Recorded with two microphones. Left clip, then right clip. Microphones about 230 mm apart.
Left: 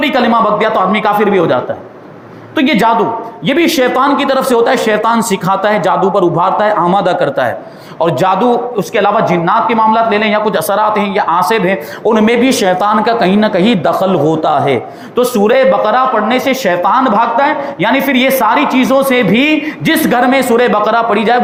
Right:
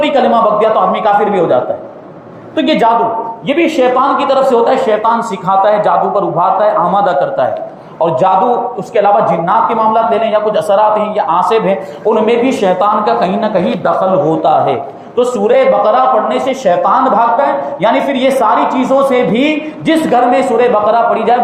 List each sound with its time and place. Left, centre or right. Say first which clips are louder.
0.0 s speech: right 1 dB; left
2.6 s speech: even; left